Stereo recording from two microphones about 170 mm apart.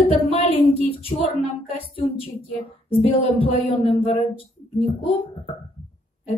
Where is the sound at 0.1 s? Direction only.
35° left (ahead or behind).